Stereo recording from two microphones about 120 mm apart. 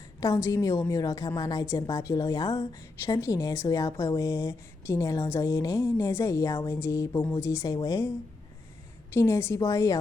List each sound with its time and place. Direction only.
0.2 s a woman's voice: 25° left (ahead or behind)
9.1 s speech: 20° left (ahead or behind)